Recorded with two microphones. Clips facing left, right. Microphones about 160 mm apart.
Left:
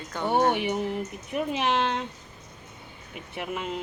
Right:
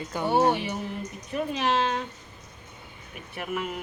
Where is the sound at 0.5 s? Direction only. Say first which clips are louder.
Left 3 dB; 20° left (ahead or behind).